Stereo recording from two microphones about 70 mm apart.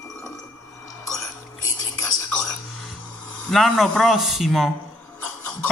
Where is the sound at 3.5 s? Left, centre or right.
Centre.